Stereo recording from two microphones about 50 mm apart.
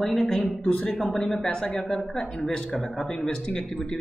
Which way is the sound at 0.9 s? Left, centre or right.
Centre.